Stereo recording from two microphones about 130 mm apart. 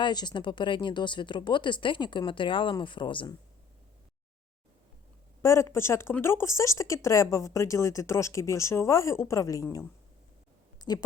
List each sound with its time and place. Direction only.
0.0 s speech: 35° left (ahead or behind)
5.4 s speech: 20° left (ahead or behind)
10.8 s a sound: 30° left (ahead or behind)